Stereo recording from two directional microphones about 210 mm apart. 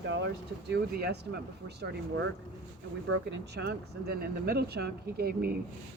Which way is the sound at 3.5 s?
50° right (ahead or behind).